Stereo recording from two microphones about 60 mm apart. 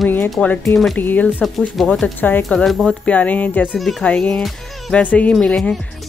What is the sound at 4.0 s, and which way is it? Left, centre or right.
Speech, centre.